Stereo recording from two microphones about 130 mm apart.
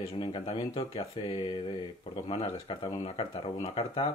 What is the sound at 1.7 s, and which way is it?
Speech, 50° left (ahead or behind).